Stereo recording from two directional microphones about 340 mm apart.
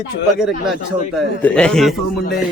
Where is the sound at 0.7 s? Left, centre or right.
Centre.